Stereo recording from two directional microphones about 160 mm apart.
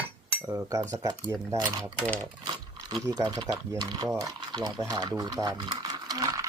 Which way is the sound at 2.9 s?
25° right (ahead or behind).